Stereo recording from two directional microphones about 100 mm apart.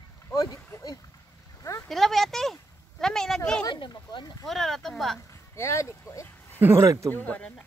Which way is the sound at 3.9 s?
50° left (ahead or behind).